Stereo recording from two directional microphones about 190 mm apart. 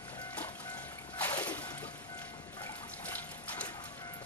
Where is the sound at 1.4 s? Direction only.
10° left (ahead or behind).